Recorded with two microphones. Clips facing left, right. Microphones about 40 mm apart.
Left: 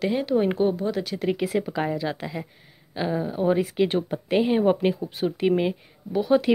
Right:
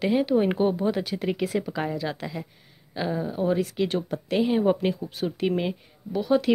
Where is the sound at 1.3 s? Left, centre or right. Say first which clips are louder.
Left 2 dB; centre.